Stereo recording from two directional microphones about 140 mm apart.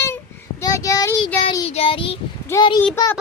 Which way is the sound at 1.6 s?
45° left (ahead or behind).